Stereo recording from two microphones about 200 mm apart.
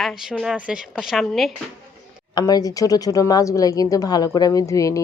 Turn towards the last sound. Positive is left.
turn(degrees=15)  # may be behind; listen again after turning